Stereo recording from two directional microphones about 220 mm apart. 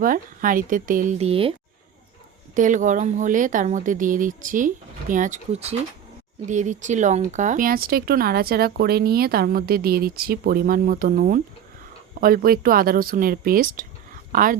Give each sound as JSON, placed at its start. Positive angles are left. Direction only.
{"t": 0.0, "sound": "speech", "side_deg": -40}
{"t": 2.6, "sound": "speech", "side_deg": -35}